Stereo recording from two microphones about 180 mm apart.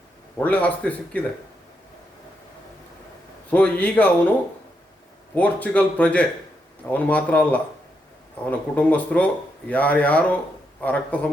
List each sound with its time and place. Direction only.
0.3 s speech: 10° left (ahead or behind)
3.5 s speech: 10° left (ahead or behind)
5.3 s speech: 10° left (ahead or behind)